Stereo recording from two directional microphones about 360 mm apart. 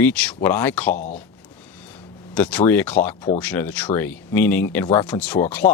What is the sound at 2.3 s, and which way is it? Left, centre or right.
Speech, centre.